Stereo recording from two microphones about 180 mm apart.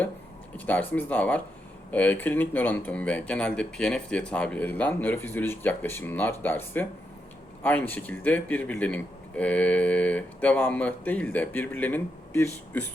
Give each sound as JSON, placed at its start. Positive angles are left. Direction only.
{"t": 0.5, "sound": "speech", "side_deg": 10}